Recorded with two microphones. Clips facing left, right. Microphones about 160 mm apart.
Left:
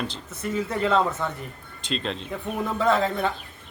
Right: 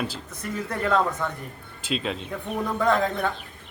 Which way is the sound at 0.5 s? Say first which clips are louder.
Left 1 dB; 10° left (ahead or behind).